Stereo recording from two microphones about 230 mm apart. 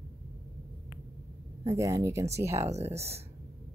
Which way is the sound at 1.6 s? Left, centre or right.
Centre.